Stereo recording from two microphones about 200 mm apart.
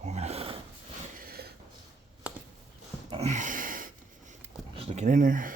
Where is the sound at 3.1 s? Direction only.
30° right (ahead or behind).